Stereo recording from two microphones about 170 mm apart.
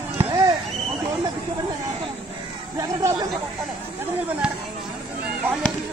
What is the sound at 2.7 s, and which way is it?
Chatter, 20° right (ahead or behind).